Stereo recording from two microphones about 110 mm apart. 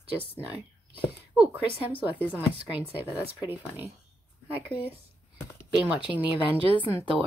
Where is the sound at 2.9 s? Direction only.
15° right (ahead or behind).